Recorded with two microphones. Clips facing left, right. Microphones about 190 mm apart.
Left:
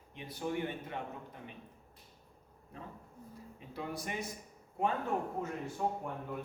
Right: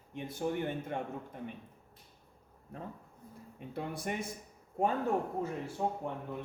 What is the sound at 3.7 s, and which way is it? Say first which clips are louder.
Speech: right 3 dB; 55° right (ahead or behind).